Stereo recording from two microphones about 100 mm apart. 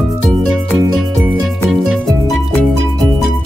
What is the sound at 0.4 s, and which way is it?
Music, 5° left (ahead or behind).